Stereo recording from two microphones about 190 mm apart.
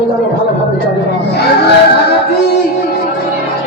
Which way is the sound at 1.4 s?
60° left (ahead or behind).